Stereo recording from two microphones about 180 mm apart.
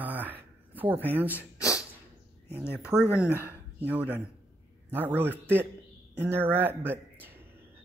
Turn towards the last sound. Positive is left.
turn(degrees=-10)  # may be behind; listen again after turning